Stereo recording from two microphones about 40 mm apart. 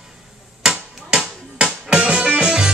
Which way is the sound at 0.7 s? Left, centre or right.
Right.